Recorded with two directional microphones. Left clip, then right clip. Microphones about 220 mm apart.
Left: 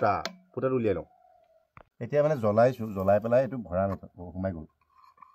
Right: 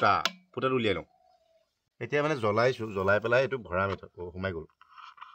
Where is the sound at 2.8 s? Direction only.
20° right (ahead or behind).